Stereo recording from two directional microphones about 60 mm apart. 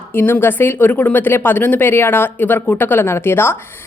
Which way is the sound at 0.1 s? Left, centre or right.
Left.